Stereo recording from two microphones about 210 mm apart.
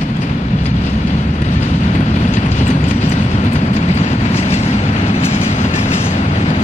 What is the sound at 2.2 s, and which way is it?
Vehicle, 35° left (ahead or behind).